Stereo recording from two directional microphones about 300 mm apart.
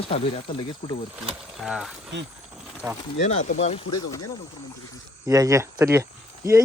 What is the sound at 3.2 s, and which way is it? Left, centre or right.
Speech, left.